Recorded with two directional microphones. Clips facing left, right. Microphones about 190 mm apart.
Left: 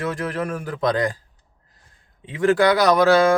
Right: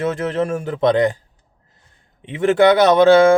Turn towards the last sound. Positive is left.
turn(degrees=-25)  # may be behind; listen again after turning